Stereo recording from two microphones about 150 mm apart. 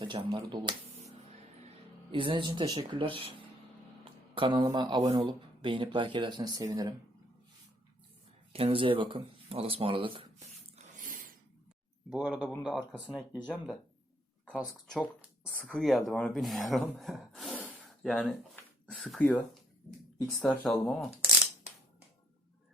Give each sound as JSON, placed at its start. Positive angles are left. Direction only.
{"t": 0.0, "sound": "speech", "side_deg": -30}
{"t": 2.1, "sound": "speech", "side_deg": -35}
{"t": 8.5, "sound": "speech", "side_deg": -35}
{"t": 10.8, "sound": "a sound", "side_deg": -60}
{"t": 12.1, "sound": "speech", "side_deg": -5}
{"t": 12.9, "sound": "speech", "side_deg": 10}
{"t": 14.5, "sound": "speech", "side_deg": 0}